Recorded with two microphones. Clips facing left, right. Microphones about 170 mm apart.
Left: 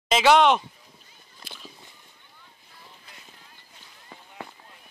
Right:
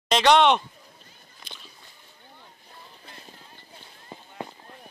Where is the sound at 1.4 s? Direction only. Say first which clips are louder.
Left 1 dB; 5° left (ahead or behind).